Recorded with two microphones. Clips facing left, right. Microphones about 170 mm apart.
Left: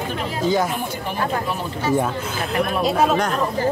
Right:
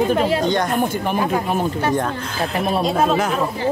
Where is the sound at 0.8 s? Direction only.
55° right (ahead or behind).